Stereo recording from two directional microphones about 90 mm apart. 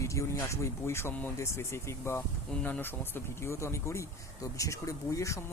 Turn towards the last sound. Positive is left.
turn(degrees=35)  # may be behind; listen again after turning